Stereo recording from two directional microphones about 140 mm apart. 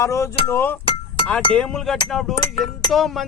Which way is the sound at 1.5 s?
5° left (ahead or behind).